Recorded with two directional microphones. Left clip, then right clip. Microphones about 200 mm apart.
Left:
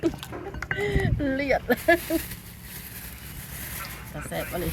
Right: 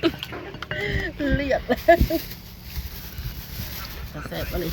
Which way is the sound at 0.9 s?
40° left (ahead or behind).